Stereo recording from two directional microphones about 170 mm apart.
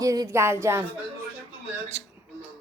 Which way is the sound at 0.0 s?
20° right (ahead or behind).